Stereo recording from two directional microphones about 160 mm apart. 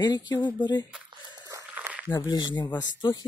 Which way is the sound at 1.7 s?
10° right (ahead or behind).